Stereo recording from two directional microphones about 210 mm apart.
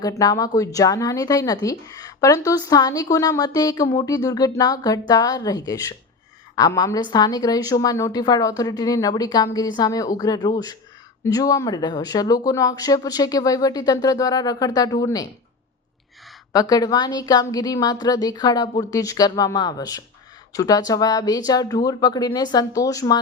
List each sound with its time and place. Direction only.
0.0 s a woman's voice: 15° left (ahead or behind)
16.5 s a woman's voice: 15° left (ahead or behind)